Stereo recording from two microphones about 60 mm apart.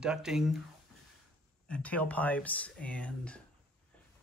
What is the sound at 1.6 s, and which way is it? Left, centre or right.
A woman's voice, left.